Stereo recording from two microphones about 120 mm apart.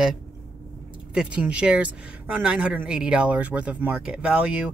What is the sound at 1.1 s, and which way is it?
Speech, 10° right (ahead or behind).